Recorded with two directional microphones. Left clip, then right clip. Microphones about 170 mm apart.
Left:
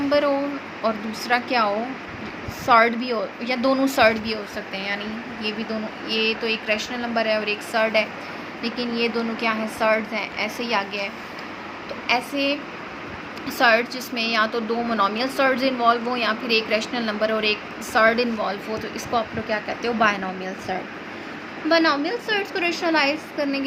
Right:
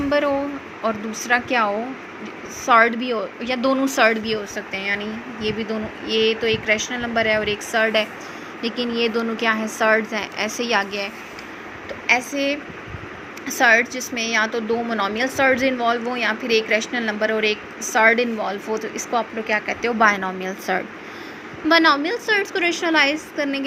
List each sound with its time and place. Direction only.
0.1 s a woman's voice: 15° right (ahead or behind)